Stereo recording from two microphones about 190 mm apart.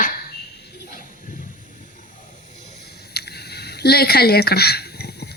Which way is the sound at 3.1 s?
60° left (ahead or behind).